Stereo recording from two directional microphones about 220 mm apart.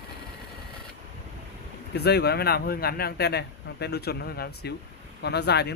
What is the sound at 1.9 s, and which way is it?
Speech, 50° left (ahead or behind).